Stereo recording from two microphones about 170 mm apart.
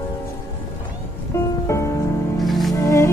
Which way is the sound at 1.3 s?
15° left (ahead or behind).